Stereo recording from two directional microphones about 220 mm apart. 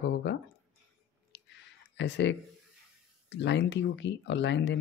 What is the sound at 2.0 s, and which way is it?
Speech, 55° left (ahead or behind).